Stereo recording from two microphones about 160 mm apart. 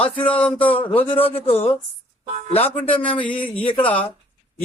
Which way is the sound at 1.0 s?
35° left (ahead or behind).